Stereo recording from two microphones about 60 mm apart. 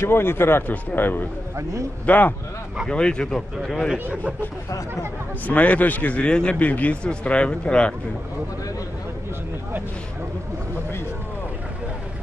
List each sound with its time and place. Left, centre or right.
0.0 s speech: left
1.6 s a man's voice: right
2.0 s a man's voice: left
2.9 s speech: centre
3.3 s a man's voice: centre
4.0 s speech: right
5.5 s a man's voice: left